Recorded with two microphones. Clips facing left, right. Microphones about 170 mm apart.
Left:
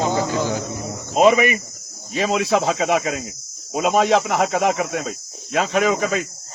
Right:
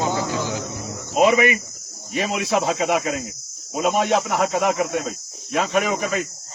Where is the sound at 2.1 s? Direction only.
25° left (ahead or behind).